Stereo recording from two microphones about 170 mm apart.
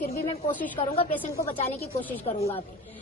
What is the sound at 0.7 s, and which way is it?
Speech, 35° left (ahead or behind).